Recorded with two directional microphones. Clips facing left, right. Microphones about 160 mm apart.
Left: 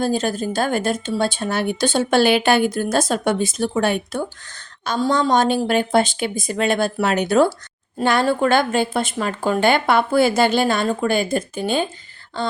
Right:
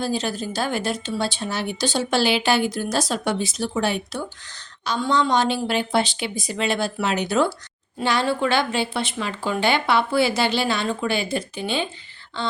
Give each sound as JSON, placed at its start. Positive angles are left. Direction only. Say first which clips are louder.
{"t": 0.0, "sound": "speech", "louder": "left 5 dB", "side_deg": 50}